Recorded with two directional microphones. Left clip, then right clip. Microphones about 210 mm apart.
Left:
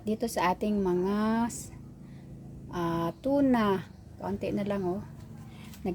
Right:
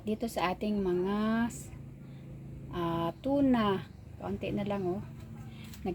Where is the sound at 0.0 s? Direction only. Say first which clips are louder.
Left 4 dB; 15° left (ahead or behind).